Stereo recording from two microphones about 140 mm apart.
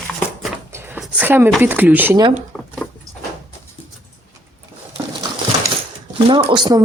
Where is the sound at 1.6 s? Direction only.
15° right (ahead or behind).